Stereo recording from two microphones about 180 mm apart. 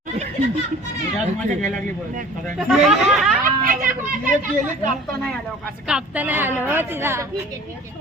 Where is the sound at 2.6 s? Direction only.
Centre (ahead or behind).